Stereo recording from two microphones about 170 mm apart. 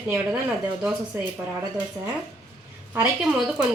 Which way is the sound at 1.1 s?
10° right (ahead or behind).